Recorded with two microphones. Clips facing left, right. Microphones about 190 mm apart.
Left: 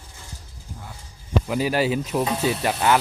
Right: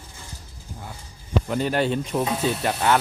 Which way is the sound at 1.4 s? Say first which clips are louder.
Left 1 dB; 5° left (ahead or behind).